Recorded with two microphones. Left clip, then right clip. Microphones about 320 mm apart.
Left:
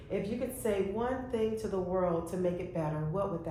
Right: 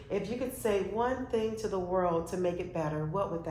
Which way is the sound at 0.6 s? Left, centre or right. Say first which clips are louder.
Right 3 dB; right.